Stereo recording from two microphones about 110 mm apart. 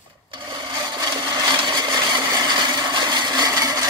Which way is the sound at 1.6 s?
45° right (ahead or behind).